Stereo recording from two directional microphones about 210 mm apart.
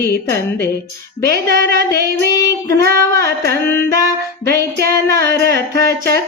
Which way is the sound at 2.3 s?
15° left (ahead or behind).